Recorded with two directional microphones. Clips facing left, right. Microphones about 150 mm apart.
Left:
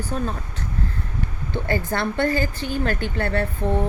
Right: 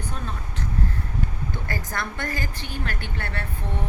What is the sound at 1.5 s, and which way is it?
A woman's voice, 25° left (ahead or behind).